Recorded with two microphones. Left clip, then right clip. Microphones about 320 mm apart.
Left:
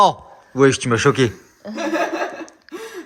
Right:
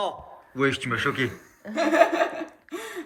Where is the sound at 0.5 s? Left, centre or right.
Centre.